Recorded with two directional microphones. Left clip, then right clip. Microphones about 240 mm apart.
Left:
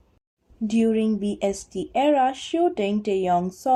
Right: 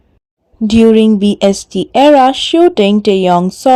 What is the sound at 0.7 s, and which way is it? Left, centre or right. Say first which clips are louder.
Speech: right 15 dB; right.